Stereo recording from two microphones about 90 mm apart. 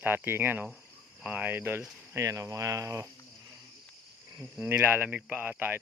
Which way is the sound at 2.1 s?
35° right (ahead or behind).